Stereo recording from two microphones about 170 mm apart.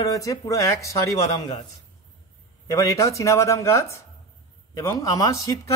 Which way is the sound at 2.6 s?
20° left (ahead or behind).